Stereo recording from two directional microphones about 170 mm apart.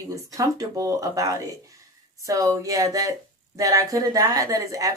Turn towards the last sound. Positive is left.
turn(degrees=-20)  # may be behind; listen again after turning